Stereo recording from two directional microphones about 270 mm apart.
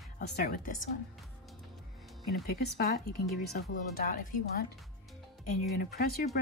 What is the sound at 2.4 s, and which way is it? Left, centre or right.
Speech, left.